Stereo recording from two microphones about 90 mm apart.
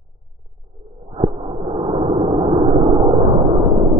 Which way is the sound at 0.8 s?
Centre (ahead or behind).